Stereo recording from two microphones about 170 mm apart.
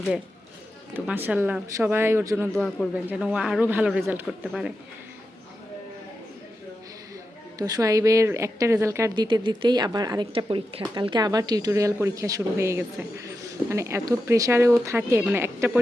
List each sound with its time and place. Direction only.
0.9 s speech: 10° right (ahead or behind)
2.5 s a man's voice: 5° left (ahead or behind)
7.6 s a woman's voice: 20° right (ahead or behind)
9.2 s a woman's voice: 25° right (ahead or behind); by 15.8 s 10° right (ahead or behind)